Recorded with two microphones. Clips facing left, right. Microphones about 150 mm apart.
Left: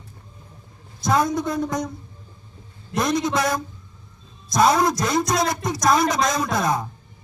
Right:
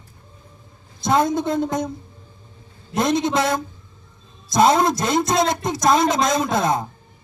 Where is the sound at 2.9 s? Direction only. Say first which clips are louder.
Right 2 dB; 25° right (ahead or behind).